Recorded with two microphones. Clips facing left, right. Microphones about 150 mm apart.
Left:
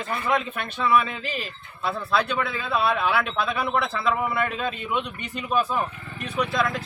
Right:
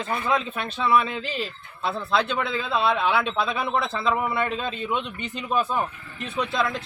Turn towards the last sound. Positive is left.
turn(degrees=-25)  # may be behind; listen again after turning